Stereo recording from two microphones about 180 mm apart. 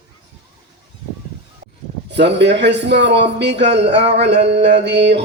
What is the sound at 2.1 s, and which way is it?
Speech, 75° right (ahead or behind).